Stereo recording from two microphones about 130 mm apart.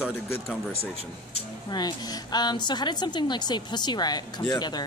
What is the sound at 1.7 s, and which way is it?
A woman's voice, 30° left (ahead or behind).